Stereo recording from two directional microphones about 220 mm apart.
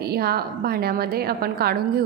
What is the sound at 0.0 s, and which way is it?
A woman's voice, 45° right (ahead or behind).